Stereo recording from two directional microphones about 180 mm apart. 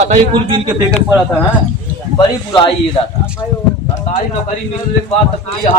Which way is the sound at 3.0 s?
30° left (ahead or behind).